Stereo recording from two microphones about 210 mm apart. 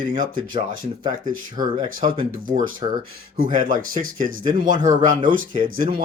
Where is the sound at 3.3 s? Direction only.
40° right (ahead or behind).